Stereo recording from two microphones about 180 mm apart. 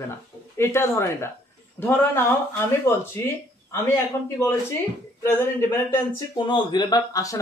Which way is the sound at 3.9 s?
15° left (ahead or behind).